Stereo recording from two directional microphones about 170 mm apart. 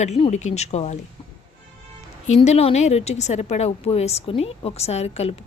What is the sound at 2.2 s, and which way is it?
A woman's voice, 40° left (ahead or behind).